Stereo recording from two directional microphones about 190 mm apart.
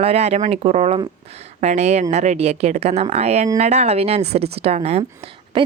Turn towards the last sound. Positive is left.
turn(degrees=-25)  # may be behind; listen again after turning